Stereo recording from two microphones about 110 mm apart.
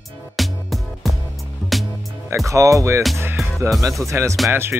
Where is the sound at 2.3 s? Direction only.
30° right (ahead or behind).